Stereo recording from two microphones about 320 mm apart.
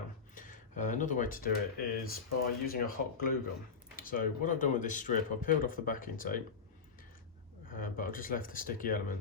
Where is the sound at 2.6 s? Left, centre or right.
Left.